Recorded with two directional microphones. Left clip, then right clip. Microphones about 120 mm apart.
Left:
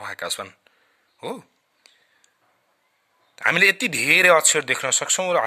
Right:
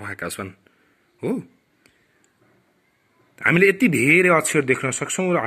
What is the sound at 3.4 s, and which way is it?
Speech, 30° left (ahead or behind).